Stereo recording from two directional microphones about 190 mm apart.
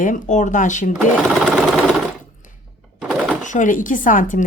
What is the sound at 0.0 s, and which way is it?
Speech, 45° left (ahead or behind).